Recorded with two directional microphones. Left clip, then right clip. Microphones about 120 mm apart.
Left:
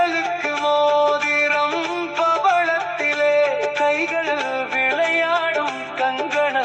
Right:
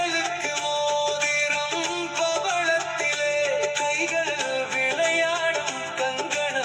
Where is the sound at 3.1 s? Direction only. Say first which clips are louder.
Left 9 dB; 60° left (ahead or behind).